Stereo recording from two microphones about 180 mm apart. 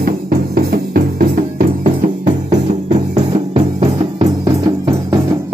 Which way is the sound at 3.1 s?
35° right (ahead or behind).